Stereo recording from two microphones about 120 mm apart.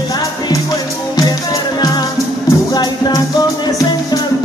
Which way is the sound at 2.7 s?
35° left (ahead or behind).